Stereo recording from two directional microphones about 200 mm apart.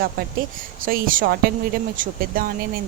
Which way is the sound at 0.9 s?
45° right (ahead or behind).